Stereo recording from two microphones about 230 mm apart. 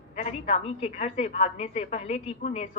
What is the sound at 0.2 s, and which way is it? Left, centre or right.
A woman's voice, left.